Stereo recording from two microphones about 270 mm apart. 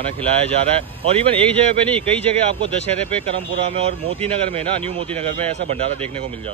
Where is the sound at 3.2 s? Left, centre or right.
Right.